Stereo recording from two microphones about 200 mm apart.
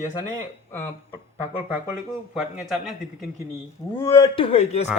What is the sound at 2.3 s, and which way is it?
Speech, centre (ahead or behind).